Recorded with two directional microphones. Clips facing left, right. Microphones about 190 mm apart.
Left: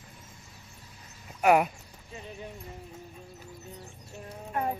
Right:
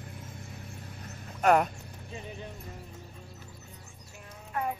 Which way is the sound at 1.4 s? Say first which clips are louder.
Left 1 dB; 10° left (ahead or behind).